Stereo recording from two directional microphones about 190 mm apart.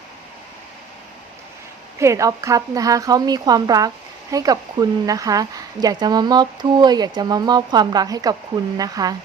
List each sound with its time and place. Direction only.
2.0 s speech: 15° right (ahead or behind)